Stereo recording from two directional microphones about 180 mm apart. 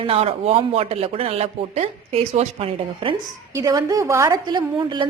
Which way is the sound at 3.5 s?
20° right (ahead or behind).